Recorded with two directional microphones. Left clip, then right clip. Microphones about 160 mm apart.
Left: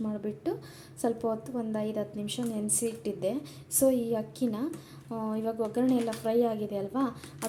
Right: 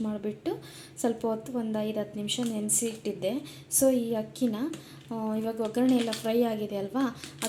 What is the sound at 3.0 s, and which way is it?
A woman's voice, 10° left (ahead or behind).